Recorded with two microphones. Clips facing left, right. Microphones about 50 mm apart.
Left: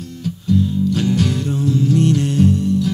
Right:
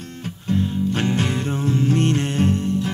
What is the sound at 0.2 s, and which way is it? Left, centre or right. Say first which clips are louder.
Music: left 5 dB; right.